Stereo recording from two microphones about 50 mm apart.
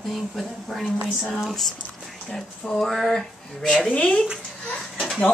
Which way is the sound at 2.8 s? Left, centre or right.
Centre.